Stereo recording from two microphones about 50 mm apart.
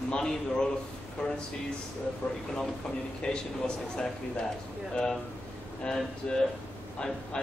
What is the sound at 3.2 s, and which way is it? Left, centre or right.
Speech, left.